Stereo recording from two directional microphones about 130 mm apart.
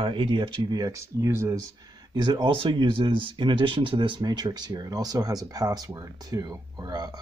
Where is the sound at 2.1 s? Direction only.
35° right (ahead or behind).